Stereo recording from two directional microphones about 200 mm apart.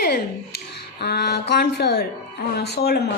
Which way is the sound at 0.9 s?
55° left (ahead or behind).